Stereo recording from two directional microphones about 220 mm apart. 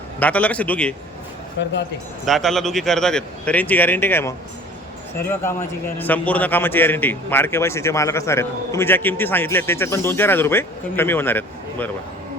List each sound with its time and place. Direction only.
0.2 s a man's voice: 5° left (ahead or behind)
1.6 s speech: 55° left (ahead or behind)
2.2 s a man's voice: centre (ahead or behind)